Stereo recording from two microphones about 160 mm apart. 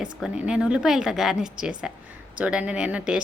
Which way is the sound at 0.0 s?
5° right (ahead or behind).